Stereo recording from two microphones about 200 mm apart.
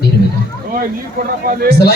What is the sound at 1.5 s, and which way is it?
Speech, 50° right (ahead or behind).